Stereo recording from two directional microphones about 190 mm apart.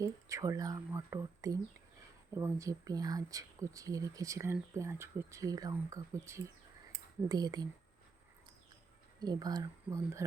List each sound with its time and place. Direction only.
0.0 s speech: 15° right (ahead or behind)
9.2 s speech: 20° right (ahead or behind)